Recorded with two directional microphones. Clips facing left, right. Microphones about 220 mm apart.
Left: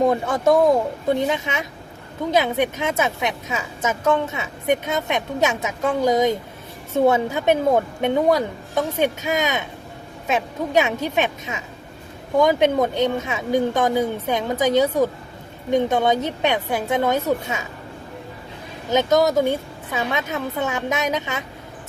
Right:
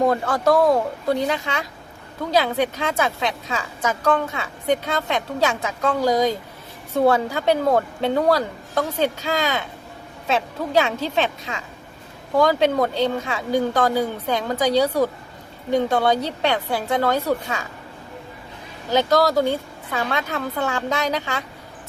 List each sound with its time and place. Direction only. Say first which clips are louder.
0.1 s a woman's voice: left 1 dB; 25° left (ahead or behind)
12.4 s a woman's voice: left 1 dB; 20° left (ahead or behind)
18.9 s a woman's voice: left 1 dB; 20° left (ahead or behind)